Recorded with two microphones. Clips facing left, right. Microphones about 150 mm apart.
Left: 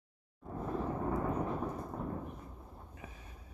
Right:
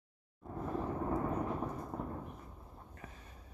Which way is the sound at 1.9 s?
15° right (ahead or behind).